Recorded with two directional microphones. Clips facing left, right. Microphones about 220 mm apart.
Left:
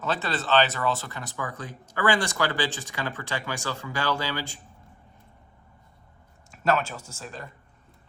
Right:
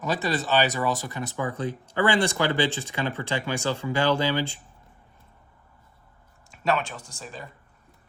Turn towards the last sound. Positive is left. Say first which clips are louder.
# even
turn(degrees=0)  # may be behind; listen again after turning